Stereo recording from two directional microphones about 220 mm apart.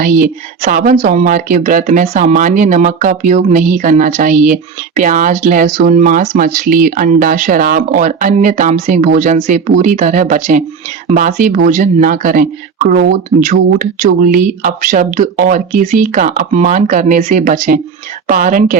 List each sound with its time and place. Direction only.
0.0 s speech: 40° right (ahead or behind)